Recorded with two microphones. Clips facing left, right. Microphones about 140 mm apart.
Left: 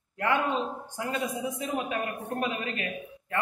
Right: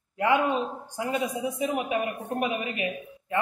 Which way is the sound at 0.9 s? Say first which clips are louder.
Right 3 dB; 15° right (ahead or behind).